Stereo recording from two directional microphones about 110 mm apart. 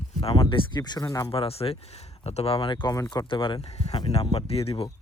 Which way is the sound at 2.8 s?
30° left (ahead or behind).